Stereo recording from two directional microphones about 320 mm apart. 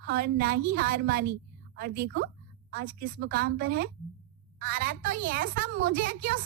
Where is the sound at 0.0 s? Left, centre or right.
Right.